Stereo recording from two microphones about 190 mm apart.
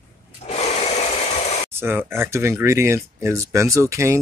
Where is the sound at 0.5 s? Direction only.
35° left (ahead or behind).